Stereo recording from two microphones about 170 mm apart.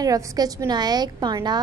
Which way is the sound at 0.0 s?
20° right (ahead or behind).